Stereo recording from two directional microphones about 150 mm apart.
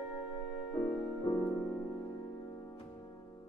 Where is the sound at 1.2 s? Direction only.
25° left (ahead or behind).